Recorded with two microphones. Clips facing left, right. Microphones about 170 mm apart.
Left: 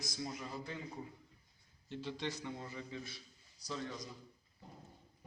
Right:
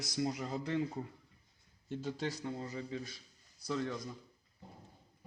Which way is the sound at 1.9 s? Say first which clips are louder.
Right 3 dB; 45° right (ahead or behind).